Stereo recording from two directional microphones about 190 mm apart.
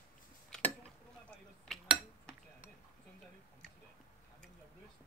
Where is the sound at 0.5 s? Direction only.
5° left (ahead or behind).